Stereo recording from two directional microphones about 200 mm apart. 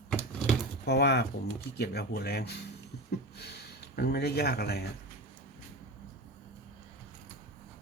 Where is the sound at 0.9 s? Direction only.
55° left (ahead or behind).